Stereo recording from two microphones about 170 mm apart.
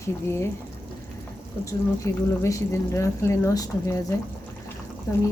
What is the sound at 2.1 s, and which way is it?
A woman's voice, 20° left (ahead or behind).